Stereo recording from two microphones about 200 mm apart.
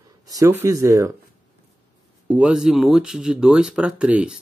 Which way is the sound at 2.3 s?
5° right (ahead or behind).